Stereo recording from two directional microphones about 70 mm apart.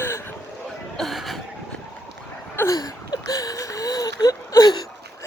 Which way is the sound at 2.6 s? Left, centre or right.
Left.